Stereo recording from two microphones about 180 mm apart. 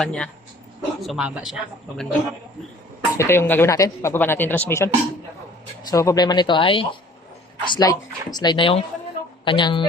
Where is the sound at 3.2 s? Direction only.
15° left (ahead or behind).